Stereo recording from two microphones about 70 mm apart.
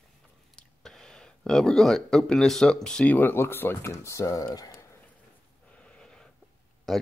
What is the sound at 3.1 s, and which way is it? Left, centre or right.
Speech, left.